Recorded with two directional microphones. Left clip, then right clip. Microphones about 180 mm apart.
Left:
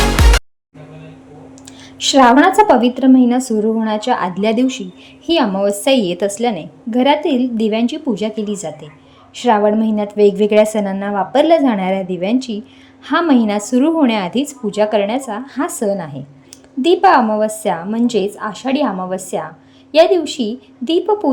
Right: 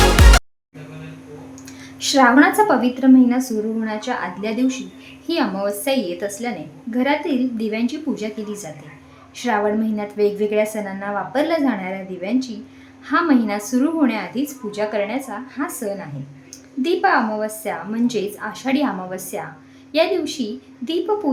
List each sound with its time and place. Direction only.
0.2 s music: centre (ahead or behind)
2.0 s a woman's voice: 30° left (ahead or behind)